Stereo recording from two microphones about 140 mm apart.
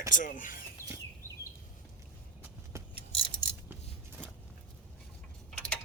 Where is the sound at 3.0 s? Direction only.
40° left (ahead or behind).